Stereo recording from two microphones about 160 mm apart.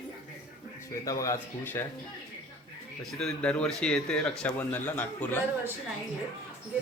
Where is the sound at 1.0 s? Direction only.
20° left (ahead or behind).